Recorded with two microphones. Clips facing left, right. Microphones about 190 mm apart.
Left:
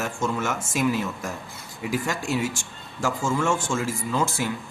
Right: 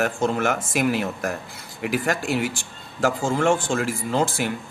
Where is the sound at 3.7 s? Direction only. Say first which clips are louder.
Right 3 dB; 60° right (ahead or behind).